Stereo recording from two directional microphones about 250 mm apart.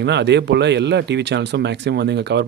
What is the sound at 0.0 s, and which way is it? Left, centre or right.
Speech, right.